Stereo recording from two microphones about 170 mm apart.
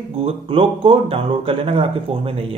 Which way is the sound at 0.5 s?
35° right (ahead or behind).